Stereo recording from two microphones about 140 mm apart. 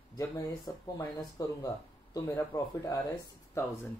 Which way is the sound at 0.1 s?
25° left (ahead or behind).